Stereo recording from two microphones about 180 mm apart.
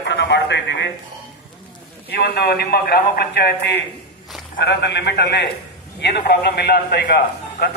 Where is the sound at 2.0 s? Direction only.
65° left (ahead or behind).